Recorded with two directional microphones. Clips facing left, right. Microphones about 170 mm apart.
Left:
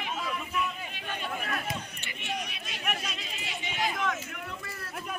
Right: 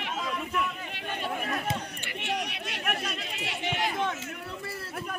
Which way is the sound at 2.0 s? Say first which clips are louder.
Right 4 dB; 70° right (ahead or behind).